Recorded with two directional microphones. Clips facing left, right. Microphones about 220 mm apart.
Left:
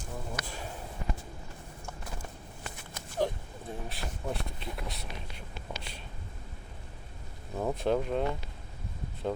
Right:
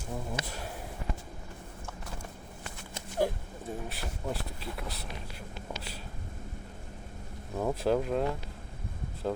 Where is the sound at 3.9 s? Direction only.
Centre (ahead or behind).